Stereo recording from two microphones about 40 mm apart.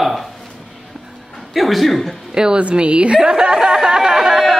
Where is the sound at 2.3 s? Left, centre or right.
Centre.